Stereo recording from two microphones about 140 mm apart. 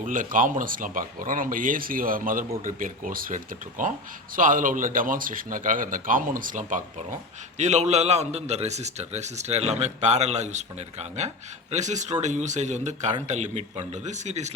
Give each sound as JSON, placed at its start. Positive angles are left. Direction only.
{"t": 0.0, "sound": "speech", "side_deg": -70}
{"t": 7.6, "sound": "a man's voice", "side_deg": -55}